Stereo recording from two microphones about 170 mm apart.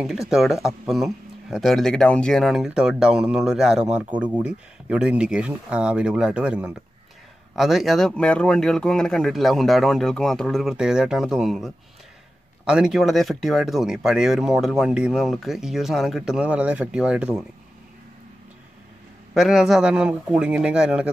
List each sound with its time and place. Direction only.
0.3 s speech: centre (ahead or behind)
19.3 s speech: centre (ahead or behind)